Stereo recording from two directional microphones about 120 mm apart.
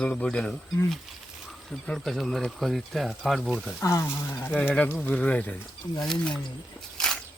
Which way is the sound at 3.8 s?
25° left (ahead or behind).